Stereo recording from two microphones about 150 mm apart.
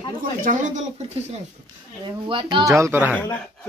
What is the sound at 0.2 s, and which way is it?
Speech, 60° right (ahead or behind).